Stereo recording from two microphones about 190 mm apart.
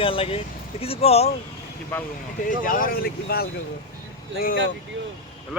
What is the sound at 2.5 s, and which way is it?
Speech, 45° left (ahead or behind).